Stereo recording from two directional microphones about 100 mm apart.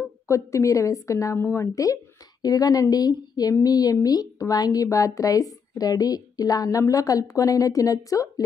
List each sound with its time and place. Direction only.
0.3 s speech: 30° left (ahead or behind)